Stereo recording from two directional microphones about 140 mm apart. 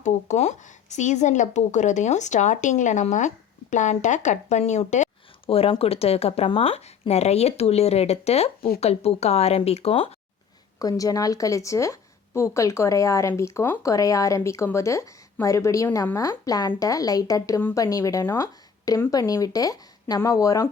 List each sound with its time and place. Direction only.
0.0 s speech: 55° left (ahead or behind)
5.5 s speech: 45° left (ahead or behind)
10.8 s a woman's voice: 25° left (ahead or behind)